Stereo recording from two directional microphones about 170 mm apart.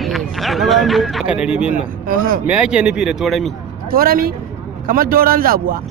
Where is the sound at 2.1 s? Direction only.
55° right (ahead or behind).